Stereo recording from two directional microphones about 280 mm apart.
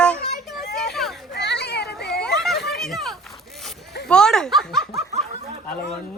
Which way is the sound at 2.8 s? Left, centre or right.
Centre.